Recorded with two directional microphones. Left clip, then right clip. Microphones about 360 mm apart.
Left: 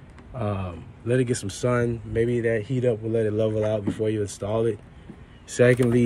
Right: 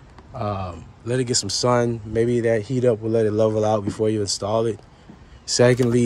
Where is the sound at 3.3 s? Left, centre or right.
Centre.